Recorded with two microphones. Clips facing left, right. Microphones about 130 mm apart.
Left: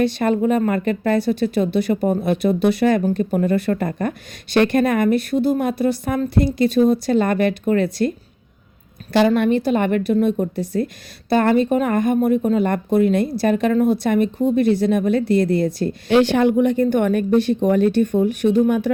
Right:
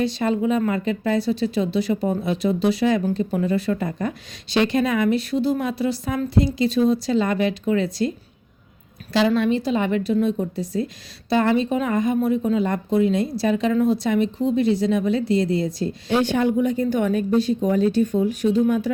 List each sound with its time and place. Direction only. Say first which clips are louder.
0.0 s speech: left 3 dB; 60° left (ahead or behind)
9.1 s speech: left 3 dB; 55° left (ahead or behind)